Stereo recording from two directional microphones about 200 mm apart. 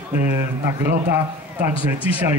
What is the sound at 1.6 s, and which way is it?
Speech, 10° right (ahead or behind).